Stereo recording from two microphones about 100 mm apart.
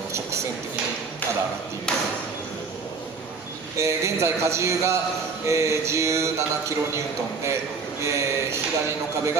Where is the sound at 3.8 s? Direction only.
30° right (ahead or behind).